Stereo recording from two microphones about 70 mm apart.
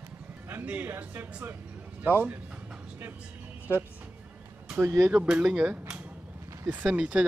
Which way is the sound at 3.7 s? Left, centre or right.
Left.